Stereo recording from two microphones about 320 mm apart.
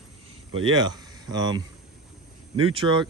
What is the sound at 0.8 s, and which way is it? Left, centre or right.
Speech, centre.